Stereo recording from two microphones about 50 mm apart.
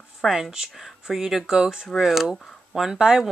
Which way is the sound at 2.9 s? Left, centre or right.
Centre.